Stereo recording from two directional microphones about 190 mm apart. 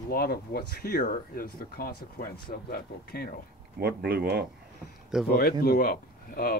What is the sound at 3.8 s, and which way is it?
Speech, 55° right (ahead or behind).